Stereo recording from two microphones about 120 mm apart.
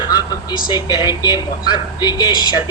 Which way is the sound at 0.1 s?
35° left (ahead or behind).